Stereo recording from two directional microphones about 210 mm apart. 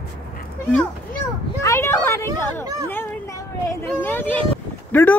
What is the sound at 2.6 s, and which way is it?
Speech, 15° right (ahead or behind).